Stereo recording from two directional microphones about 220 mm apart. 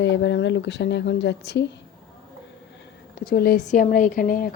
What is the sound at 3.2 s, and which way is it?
Speech, 45° left (ahead or behind).